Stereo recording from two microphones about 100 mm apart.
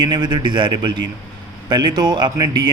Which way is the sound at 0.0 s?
50° right (ahead or behind).